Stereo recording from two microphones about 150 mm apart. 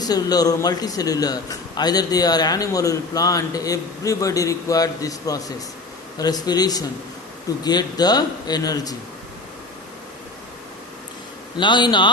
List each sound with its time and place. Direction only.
0.0 s a man's voice: 25° left (ahead or behind)
11.5 s speech: 30° left (ahead or behind)